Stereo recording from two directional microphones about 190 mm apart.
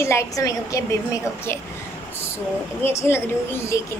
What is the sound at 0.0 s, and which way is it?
Speech, 15° left (ahead or behind).